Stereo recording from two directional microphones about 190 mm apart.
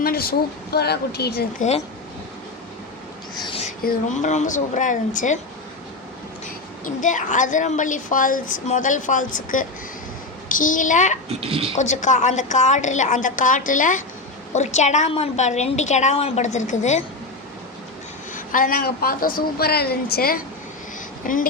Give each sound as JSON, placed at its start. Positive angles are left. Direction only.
{"t": 0.0, "sound": "a woman's voice", "side_deg": 50}
{"t": 3.4, "sound": "a sound", "side_deg": 30}
{"t": 3.8, "sound": "a woman's voice", "side_deg": 40}
{"t": 6.8, "sound": "a woman's voice", "side_deg": 40}
{"t": 11.3, "sound": "speech", "side_deg": -30}
{"t": 11.8, "sound": "a woman's voice", "side_deg": 40}
{"t": 18.3, "sound": "a woman's voice", "side_deg": 45}